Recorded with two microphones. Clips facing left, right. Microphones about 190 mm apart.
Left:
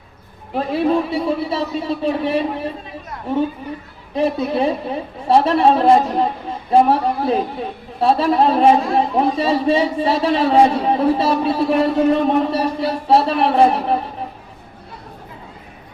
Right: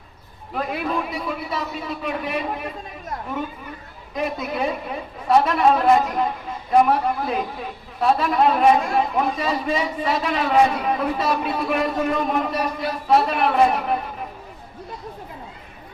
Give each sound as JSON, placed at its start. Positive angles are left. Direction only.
{"t": 0.5, "sound": "a man's voice", "side_deg": 30}
{"t": 4.1, "sound": "a man's voice", "side_deg": 30}